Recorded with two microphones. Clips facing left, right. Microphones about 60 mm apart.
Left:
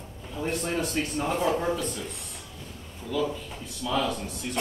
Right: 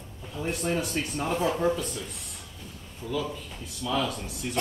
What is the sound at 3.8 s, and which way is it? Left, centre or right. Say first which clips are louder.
Speech: left 1 dB; centre.